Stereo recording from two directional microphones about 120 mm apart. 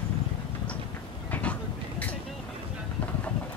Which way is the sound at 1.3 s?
15° left (ahead or behind).